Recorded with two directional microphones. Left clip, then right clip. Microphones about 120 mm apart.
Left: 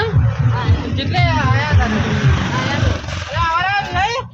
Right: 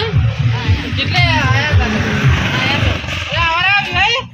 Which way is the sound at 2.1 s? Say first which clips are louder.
Right 4 dB; 75° right (ahead or behind).